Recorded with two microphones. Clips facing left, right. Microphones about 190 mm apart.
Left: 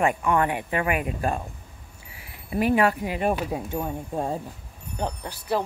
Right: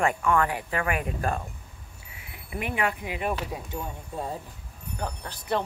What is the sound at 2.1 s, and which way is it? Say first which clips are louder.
Speech: left 9 dB; 35° left (ahead or behind).